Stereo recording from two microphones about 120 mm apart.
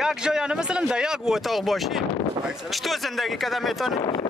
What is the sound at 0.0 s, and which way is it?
Speech, 5° right (ahead or behind).